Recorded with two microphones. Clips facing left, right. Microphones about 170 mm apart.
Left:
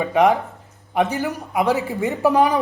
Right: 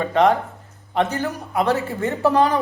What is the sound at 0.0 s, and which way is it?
Speech, 10° left (ahead or behind).